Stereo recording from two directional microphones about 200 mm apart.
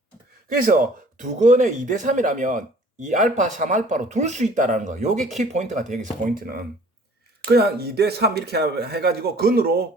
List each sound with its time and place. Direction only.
0.4 s speech: 45° right (ahead or behind)